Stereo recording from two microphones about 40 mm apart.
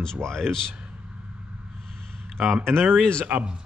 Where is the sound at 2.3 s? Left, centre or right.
Centre.